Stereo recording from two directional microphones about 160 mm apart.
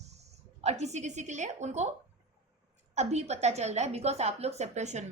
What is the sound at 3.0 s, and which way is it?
A woman's voice, 45° right (ahead or behind).